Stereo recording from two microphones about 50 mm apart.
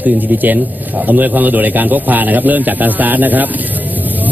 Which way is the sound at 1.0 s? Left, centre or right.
Right.